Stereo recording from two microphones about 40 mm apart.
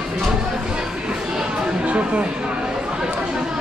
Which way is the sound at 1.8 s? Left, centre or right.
Right.